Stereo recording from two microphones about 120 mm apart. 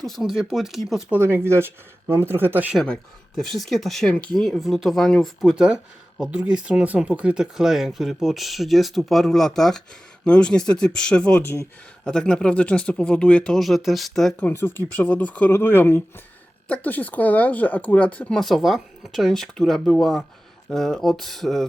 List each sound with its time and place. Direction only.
0.0 s speech: centre (ahead or behind)
1.1 s speech: 20° right (ahead or behind)
2.7 s speech: 5° left (ahead or behind)
14.3 s speech: 15° left (ahead or behind)